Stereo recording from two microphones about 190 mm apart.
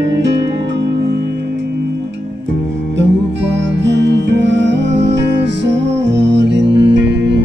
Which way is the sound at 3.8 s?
70° right (ahead or behind).